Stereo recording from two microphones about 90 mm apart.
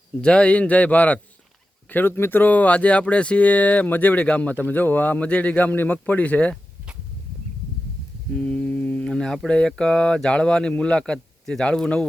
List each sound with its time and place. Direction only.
0.2 s speech: 10° left (ahead or behind)
8.3 s mantra: 15° left (ahead or behind)
9.5 s speech: 10° left (ahead or behind)